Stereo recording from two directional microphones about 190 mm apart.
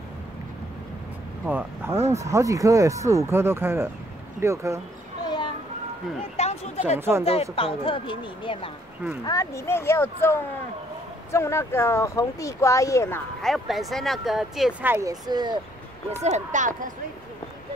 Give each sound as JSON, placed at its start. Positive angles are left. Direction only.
{"t": 1.4, "sound": "speech", "side_deg": -10}
{"t": 6.3, "sound": "a sound", "side_deg": 35}
{"t": 7.0, "sound": "speech", "side_deg": -10}
{"t": 7.2, "sound": "speech", "side_deg": 30}
{"t": 13.4, "sound": "speech", "side_deg": 0}
{"t": 16.2, "sound": "speech", "side_deg": -35}